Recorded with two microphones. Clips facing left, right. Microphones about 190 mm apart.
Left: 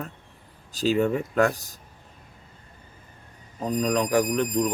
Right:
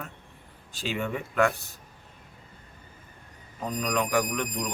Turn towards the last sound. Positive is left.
turn(degrees=35)  # may be behind; listen again after turning